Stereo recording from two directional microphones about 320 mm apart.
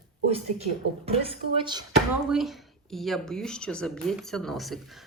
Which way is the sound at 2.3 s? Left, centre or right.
Centre.